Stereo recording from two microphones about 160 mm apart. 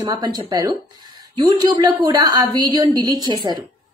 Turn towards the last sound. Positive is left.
turn(degrees=-25)  # may be behind; listen again after turning